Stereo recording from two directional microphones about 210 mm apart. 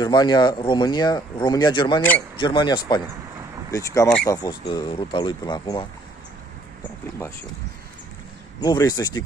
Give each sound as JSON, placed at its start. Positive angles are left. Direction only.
{"t": 0.0, "sound": "speech", "side_deg": 20}
{"t": 8.5, "sound": "speech", "side_deg": 20}